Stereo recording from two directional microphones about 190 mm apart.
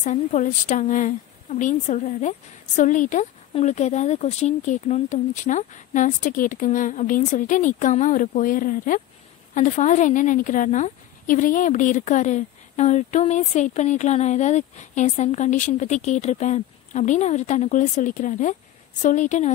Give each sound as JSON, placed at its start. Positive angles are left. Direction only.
{"t": 0.0, "sound": "a woman's voice", "side_deg": 40}